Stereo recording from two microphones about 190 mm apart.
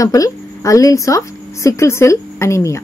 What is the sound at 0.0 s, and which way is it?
A woman's voice, 15° left (ahead or behind).